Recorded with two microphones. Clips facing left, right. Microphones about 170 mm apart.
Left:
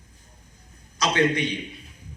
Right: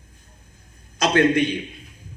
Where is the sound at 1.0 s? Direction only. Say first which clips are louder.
Right 5 dB; 50° right (ahead or behind).